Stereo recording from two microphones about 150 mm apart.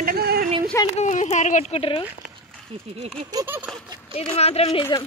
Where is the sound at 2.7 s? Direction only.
45° right (ahead or behind).